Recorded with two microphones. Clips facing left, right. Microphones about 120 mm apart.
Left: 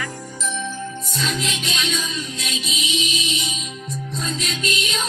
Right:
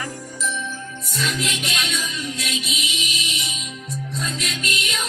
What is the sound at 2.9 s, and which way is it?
Music, 25° left (ahead or behind).